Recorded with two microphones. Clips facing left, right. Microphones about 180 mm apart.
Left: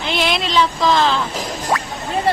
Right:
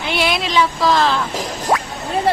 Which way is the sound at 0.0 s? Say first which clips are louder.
Even; 10° right (ahead or behind).